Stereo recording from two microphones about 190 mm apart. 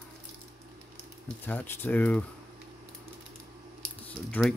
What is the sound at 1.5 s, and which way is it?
Speech, 10° left (ahead or behind).